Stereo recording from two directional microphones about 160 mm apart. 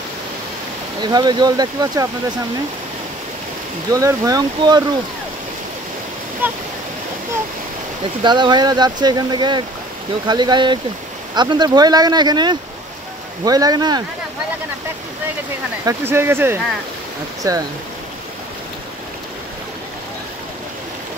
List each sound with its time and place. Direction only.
1.0 s speech: 25° right (ahead or behind)
3.9 s speech: 20° right (ahead or behind)
6.4 s speech: 10° right (ahead or behind)
8.2 s speech: 30° right (ahead or behind)
15.8 s speech: 15° right (ahead or behind)